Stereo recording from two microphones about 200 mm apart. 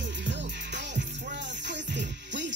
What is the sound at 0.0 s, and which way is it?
Music, 60° right (ahead or behind).